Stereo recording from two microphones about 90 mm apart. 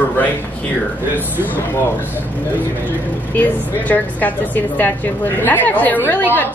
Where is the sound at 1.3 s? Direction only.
20° right (ahead or behind).